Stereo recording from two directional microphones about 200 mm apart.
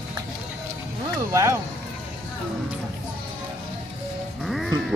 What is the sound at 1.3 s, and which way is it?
Speech, 15° right (ahead or behind).